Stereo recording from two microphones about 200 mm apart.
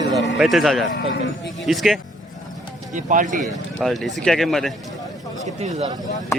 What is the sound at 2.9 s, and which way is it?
Speech, 40° right (ahead or behind).